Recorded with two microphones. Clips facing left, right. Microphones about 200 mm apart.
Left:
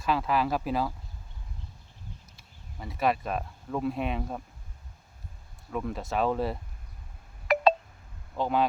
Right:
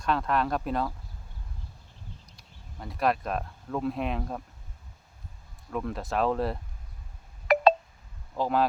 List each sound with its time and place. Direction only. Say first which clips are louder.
0.0 s speech: even; 5° left (ahead or behind)
2.3 s speech: even; centre (ahead or behind)
5.7 s speech: even; centre (ahead or behind)
7.5 s telephone dialing: right 3 dB; 50° right (ahead or behind)
8.4 s speech: right 1 dB; centre (ahead or behind)